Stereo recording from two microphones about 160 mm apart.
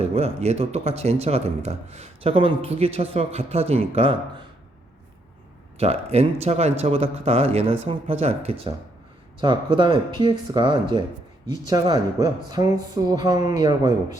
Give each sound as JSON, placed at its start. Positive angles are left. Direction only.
{"t": 0.0, "sound": "speech", "side_deg": -40}
{"t": 5.7, "sound": "speech", "side_deg": -40}
{"t": 12.5, "sound": "speech", "side_deg": -25}